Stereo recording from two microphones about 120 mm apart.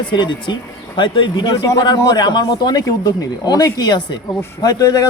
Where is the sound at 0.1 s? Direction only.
40° left (ahead or behind).